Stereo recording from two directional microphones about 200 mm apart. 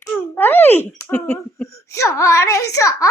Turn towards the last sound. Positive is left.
turn(degrees=15)  # may be behind; listen again after turning